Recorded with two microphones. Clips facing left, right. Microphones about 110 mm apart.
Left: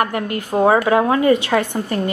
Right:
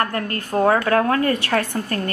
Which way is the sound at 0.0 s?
15° left (ahead or behind).